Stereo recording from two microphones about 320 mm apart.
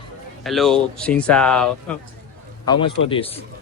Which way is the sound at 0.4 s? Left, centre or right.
Centre.